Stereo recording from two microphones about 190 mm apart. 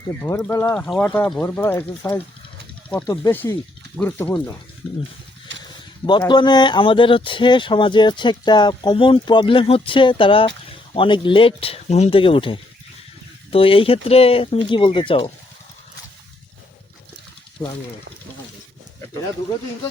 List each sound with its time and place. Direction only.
0.1 s speech: 10° left (ahead or behind)
5.5 s a sound: 75° right (ahead or behind)
6.1 s speech: 25° left (ahead or behind)
17.6 s speech: 15° left (ahead or behind)